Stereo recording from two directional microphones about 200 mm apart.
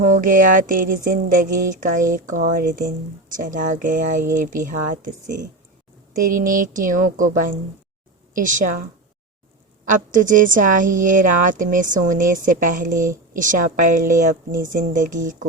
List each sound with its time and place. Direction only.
0.0 s speech: 40° right (ahead or behind)
10.1 s speech: 40° right (ahead or behind)